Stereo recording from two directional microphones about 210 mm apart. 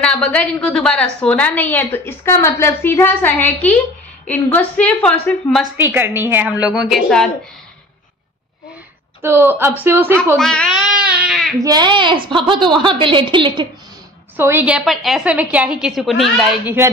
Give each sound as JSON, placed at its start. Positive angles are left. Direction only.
{"t": 0.0, "sound": "a woman's voice", "side_deg": 5}
{"t": 5.8, "sound": "a woman's voice", "side_deg": -10}
{"t": 9.2, "sound": "speech", "side_deg": -10}
{"t": 10.3, "sound": "a woman's voice", "side_deg": 5}
{"t": 11.0, "sound": "baby cry", "side_deg": -5}
{"t": 11.5, "sound": "a woman's voice", "side_deg": -20}
{"t": 14.3, "sound": "a woman's voice", "side_deg": -10}